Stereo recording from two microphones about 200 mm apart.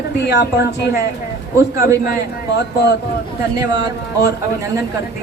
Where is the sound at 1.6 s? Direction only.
15° right (ahead or behind).